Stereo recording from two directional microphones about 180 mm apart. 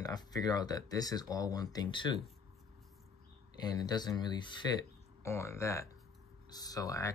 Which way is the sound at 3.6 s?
20° left (ahead or behind).